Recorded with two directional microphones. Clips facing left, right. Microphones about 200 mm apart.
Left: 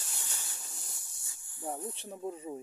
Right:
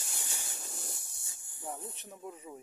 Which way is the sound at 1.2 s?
20° right (ahead or behind).